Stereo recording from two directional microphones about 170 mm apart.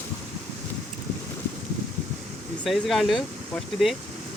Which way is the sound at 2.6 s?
Centre (ahead or behind).